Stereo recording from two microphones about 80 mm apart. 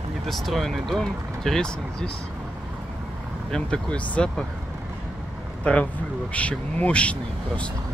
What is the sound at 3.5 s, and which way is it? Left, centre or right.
Speech, centre.